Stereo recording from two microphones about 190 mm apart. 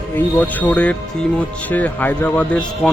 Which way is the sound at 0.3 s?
10° left (ahead or behind).